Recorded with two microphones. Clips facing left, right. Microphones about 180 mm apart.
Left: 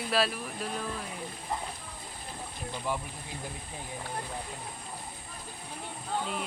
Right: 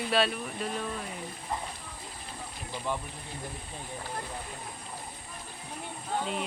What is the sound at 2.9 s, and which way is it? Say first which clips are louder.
Speech: even; 10° left (ahead or behind).